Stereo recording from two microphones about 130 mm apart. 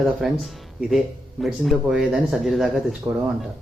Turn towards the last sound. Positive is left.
turn(degrees=-5)  # may be behind; listen again after turning